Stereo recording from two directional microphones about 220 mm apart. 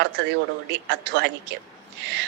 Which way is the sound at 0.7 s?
50° right (ahead or behind).